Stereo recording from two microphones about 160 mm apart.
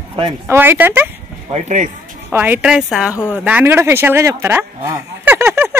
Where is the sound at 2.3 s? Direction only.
10° right (ahead or behind).